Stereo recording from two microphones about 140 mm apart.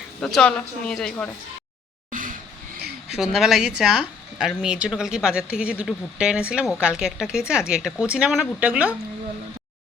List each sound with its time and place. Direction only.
0.2 s speech: 5° left (ahead or behind)
2.0 s a sound: 75° right (ahead or behind)
3.2 s speech: 5° right (ahead or behind)